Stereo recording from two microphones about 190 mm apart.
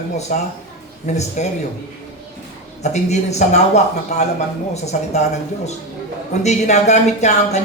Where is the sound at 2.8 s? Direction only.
35° left (ahead or behind).